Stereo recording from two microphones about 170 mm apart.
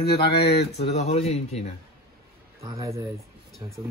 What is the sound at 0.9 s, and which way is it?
Speech, 40° left (ahead or behind).